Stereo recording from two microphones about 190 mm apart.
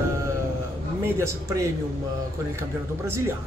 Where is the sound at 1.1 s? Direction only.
15° right (ahead or behind).